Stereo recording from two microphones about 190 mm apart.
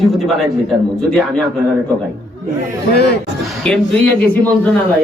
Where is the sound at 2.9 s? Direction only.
60° left (ahead or behind).